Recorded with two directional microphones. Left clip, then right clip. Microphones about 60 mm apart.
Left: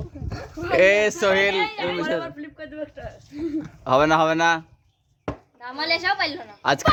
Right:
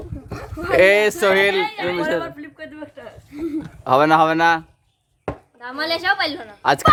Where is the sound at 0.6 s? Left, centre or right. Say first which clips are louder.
Right 3 dB; right.